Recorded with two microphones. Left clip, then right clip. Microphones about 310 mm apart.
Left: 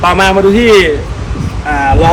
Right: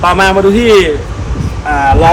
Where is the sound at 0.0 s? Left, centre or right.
Centre.